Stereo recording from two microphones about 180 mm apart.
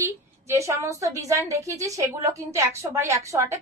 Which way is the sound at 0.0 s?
15° right (ahead or behind).